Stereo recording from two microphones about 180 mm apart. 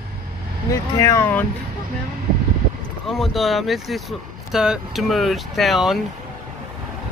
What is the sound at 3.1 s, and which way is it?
Speech, centre (ahead or behind).